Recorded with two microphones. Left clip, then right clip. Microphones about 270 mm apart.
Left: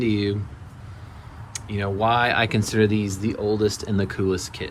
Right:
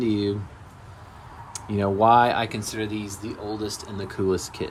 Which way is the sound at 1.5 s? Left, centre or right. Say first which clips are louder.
Right 3 dB; centre.